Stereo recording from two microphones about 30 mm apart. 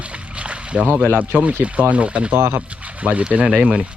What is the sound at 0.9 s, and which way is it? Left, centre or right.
Speech, right.